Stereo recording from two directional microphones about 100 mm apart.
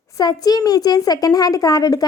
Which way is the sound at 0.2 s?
40° left (ahead or behind).